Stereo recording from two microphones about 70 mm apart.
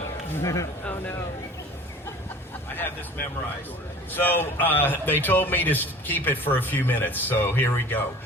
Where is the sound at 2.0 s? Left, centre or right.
Left.